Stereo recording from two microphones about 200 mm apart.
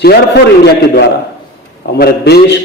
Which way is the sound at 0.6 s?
55° left (ahead or behind).